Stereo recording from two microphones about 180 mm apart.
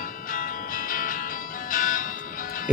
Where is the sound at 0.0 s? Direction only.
50° left (ahead or behind).